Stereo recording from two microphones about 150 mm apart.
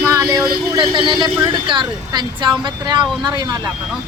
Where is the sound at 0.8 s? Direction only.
30° right (ahead or behind).